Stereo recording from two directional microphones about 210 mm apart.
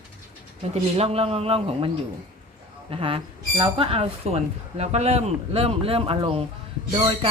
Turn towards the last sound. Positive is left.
turn(degrees=-20)  # may be behind; listen again after turning